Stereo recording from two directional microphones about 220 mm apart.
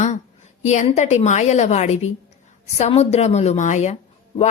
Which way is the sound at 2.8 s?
30° left (ahead or behind).